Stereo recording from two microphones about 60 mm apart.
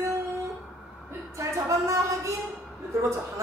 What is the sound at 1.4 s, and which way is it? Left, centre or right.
Speech, right.